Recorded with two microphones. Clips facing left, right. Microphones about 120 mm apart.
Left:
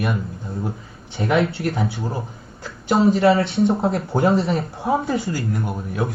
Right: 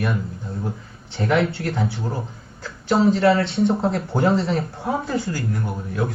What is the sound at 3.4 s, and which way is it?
Speech, 25° right (ahead or behind).